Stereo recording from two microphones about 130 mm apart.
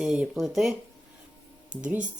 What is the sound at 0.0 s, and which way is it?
Speech, 5° right (ahead or behind).